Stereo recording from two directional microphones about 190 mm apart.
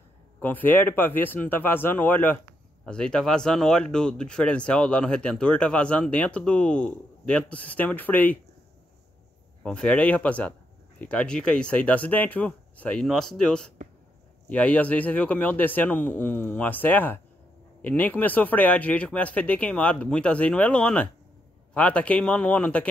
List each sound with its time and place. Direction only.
0.4 s speech: 10° left (ahead or behind)
9.6 s speech: 5° left (ahead or behind)